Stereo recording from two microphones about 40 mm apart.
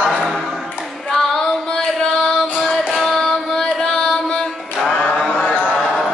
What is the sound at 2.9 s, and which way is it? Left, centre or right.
Carnatic music, centre.